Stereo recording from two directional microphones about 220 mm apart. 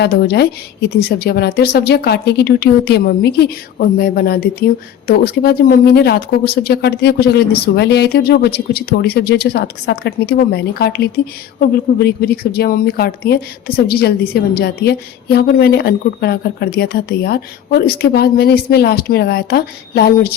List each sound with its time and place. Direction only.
0.0 s a woman's voice: 50° left (ahead or behind)